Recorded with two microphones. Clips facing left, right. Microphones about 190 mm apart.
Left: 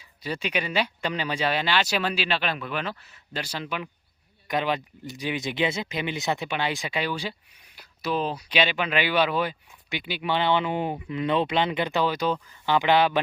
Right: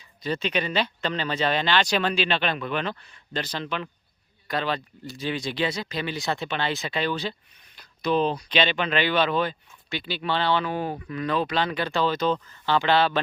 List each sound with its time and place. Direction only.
0.2 s speech: 10° left (ahead or behind)